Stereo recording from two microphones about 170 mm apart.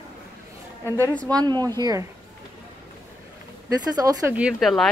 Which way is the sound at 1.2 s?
25° right (ahead or behind).